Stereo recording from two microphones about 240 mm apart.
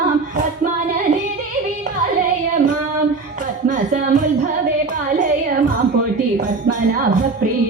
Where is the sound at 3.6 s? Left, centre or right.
Right.